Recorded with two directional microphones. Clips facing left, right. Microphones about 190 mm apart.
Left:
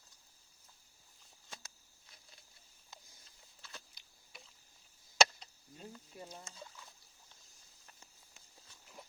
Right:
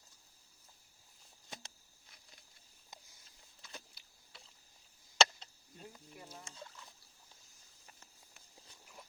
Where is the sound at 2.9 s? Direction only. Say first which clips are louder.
Right 1 dB; 20° right (ahead or behind).